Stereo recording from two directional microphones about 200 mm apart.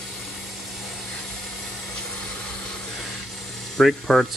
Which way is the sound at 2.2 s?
5° left (ahead or behind).